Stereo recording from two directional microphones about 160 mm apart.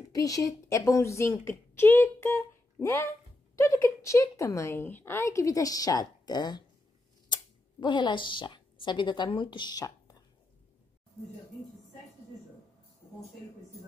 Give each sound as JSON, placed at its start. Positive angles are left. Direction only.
{"t": 0.1, "sound": "a woman's voice", "side_deg": 20}
{"t": 7.8, "sound": "speech", "side_deg": 30}